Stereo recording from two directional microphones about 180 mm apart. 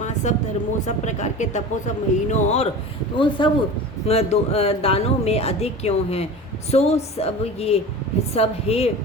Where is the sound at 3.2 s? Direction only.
25° left (ahead or behind).